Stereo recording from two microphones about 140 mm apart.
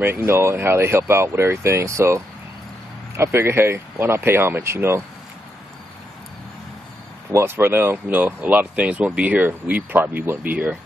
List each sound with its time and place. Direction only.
0.0 s speech: 15° right (ahead or behind)
7.3 s speech: 15° right (ahead or behind)